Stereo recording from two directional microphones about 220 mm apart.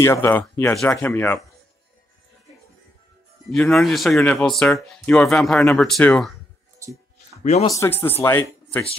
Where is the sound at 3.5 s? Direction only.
Centre (ahead or behind).